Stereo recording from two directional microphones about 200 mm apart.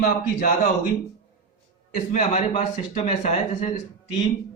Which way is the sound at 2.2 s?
35° left (ahead or behind).